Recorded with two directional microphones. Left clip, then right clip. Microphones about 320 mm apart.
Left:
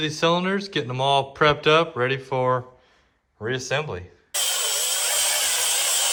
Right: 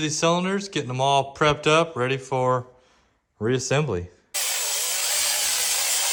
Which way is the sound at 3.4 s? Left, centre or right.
Right.